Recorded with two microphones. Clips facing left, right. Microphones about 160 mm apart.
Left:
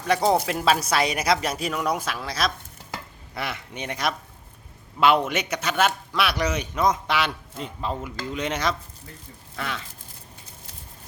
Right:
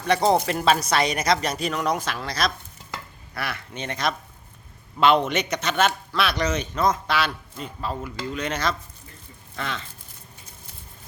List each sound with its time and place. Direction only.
0.0 s speech: centre (ahead or behind)
3.3 s a man's voice: 20° left (ahead or behind)
9.6 s a man's voice: 5° left (ahead or behind)